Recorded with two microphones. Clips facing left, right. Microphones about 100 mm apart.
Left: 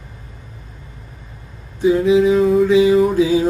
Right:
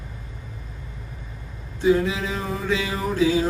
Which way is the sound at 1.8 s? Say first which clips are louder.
Left 7 dB; 20° left (ahead or behind).